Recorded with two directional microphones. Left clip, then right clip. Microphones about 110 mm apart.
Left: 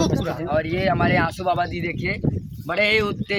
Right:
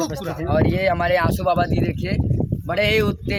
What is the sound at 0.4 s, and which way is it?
Speech, 90° right.